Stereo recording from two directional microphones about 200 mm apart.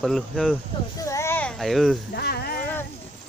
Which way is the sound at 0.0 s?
Centre (ahead or behind).